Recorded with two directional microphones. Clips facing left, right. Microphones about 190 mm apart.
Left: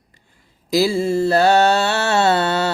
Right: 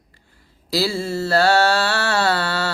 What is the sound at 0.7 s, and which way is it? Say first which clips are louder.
Mantra: left 5 dB; 15° left (ahead or behind).